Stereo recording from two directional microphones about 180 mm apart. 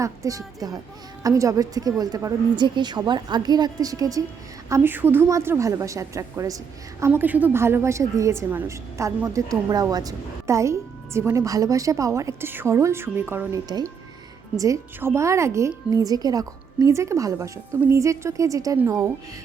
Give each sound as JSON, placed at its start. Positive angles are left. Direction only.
{"t": 0.0, "sound": "a woman's voice", "side_deg": -20}